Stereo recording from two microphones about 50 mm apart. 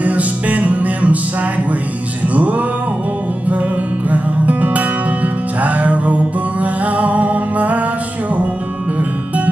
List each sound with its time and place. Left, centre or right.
0.0 s music: right
2.2 s music: right
4.1 s music: right